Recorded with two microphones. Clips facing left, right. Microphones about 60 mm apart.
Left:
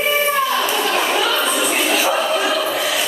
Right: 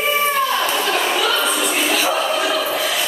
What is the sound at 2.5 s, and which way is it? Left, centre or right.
Music, centre.